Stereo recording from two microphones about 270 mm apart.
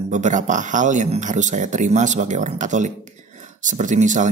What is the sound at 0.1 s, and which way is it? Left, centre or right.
Speech, right.